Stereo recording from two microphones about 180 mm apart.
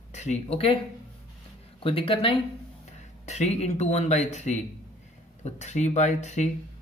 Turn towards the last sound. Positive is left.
turn(degrees=40)  # may be behind; listen again after turning